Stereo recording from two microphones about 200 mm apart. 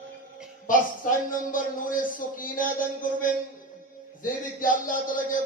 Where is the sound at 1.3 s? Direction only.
45° left (ahead or behind).